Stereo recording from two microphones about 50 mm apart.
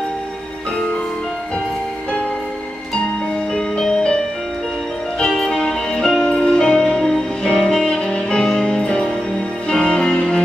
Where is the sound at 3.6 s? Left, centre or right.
Centre.